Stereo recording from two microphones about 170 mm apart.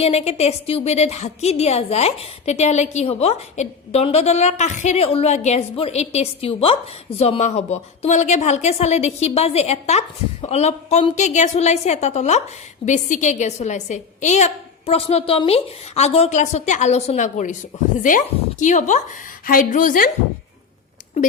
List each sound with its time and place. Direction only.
0.0 s a woman's voice: 40° left (ahead or behind)
18.6 s a woman's voice: 45° left (ahead or behind)